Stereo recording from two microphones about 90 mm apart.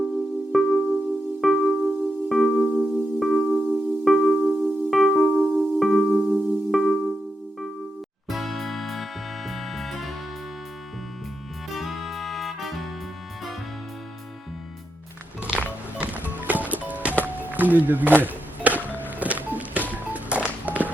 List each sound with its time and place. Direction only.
0.5 s music: centre (ahead or behind)
8.3 s music: centre (ahead or behind)
11.7 s music: centre (ahead or behind)
15.4 s music: 15° right (ahead or behind)
18.9 s music: 20° left (ahead or behind)
19.2 s music: 15° right (ahead or behind)